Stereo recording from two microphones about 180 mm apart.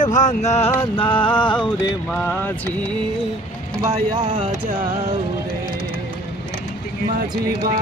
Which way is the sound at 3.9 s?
25° right (ahead or behind).